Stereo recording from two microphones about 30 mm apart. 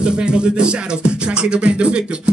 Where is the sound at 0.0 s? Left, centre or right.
Right.